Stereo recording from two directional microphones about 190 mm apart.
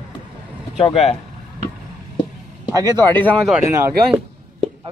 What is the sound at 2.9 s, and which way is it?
Speech, 10° left (ahead or behind).